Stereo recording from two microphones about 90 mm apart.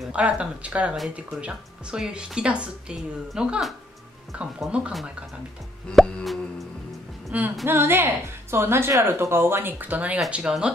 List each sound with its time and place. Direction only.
0.1 s speech: 15° right (ahead or behind)
6.0 s plop: centre (ahead or behind)
7.6 s a woman's voice: 25° right (ahead or behind); by 10.7 s 10° right (ahead or behind)